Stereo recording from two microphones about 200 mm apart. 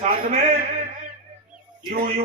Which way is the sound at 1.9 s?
45° right (ahead or behind).